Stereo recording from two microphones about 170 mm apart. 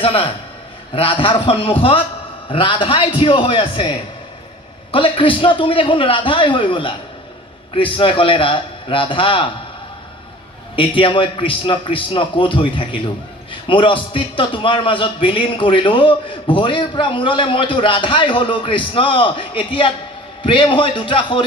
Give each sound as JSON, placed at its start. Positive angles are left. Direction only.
{"t": 0.0, "sound": "a man's voice", "side_deg": 30}
{"t": 10.8, "sound": "a man's voice", "side_deg": 30}